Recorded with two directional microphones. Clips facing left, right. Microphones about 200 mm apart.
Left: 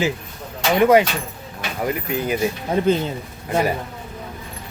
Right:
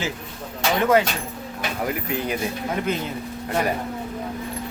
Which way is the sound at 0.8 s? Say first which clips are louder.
Left 5 dB; 15° left (ahead or behind).